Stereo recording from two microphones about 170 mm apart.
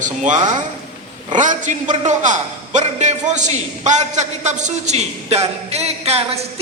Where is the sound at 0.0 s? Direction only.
45° right (ahead or behind).